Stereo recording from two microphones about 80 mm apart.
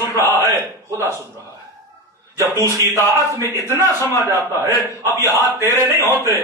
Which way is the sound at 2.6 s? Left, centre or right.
Right.